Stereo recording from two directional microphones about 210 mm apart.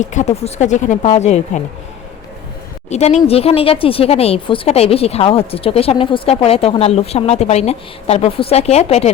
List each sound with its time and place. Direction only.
0.0 s speech: 35° left (ahead or behind)
2.9 s a woman's voice: 30° left (ahead or behind)